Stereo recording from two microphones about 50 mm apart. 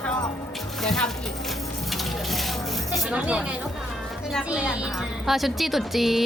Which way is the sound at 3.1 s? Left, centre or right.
Right.